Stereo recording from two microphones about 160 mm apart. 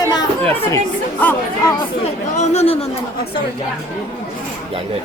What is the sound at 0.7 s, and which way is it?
Speech, 10° left (ahead or behind).